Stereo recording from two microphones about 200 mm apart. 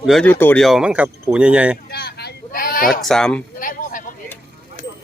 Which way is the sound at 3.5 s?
45° left (ahead or behind).